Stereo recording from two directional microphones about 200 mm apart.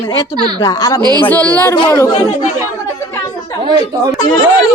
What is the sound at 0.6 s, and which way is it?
A woman's voice, 15° left (ahead or behind).